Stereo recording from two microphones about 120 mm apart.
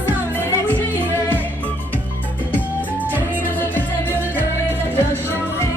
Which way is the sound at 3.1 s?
15° left (ahead or behind).